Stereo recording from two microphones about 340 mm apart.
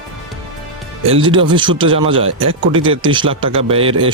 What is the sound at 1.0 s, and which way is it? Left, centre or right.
Speech, centre.